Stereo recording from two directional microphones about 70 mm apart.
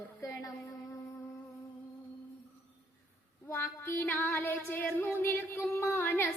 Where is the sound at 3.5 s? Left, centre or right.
Left.